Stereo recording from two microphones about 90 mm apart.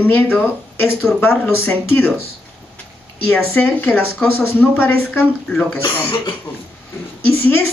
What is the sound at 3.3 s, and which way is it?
A woman's voice, 20° left (ahead or behind).